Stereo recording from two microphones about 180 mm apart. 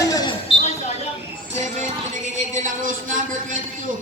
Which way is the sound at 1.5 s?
40° right (ahead or behind).